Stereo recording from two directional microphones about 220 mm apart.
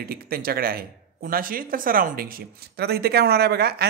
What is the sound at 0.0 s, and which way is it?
Speech, 40° right (ahead or behind).